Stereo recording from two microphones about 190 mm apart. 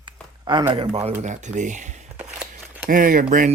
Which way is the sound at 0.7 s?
30° right (ahead or behind).